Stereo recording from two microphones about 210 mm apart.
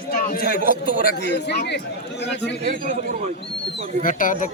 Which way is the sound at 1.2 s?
55° left (ahead or behind).